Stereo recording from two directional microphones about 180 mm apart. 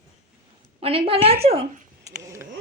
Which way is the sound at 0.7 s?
30° right (ahead or behind).